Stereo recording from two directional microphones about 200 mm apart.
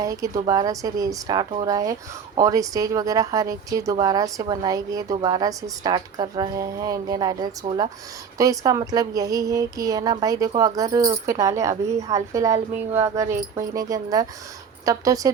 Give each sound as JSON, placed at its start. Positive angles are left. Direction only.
{"t": 0.0, "sound": "speech", "side_deg": -15}